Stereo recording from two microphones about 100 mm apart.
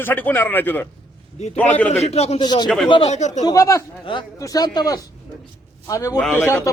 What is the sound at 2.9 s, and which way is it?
Speech, 65° left (ahead or behind).